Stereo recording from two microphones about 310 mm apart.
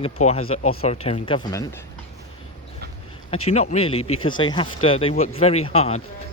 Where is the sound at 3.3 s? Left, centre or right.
Centre.